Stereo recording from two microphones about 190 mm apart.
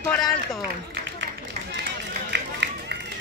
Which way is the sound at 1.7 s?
65° right (ahead or behind).